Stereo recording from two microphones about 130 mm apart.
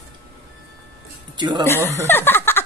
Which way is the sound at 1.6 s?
20° left (ahead or behind).